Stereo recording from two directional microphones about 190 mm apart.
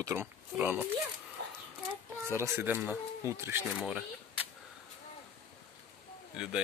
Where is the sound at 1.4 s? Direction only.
60° right (ahead or behind).